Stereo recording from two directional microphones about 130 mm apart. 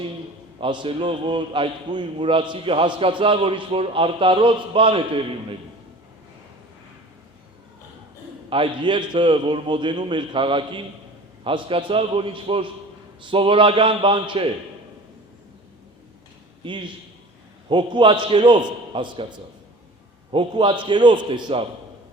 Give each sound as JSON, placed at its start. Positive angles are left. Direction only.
{"t": 0.6, "sound": "a man's voice", "side_deg": -40}
{"t": 8.4, "sound": "a man's voice", "side_deg": -45}
{"t": 16.6, "sound": "a man's voice", "side_deg": -40}